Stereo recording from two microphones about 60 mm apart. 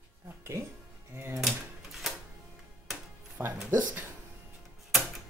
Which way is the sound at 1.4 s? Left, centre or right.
Centre.